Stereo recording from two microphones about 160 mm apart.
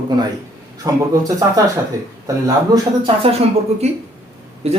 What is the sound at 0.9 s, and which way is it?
Speech, 20° right (ahead or behind).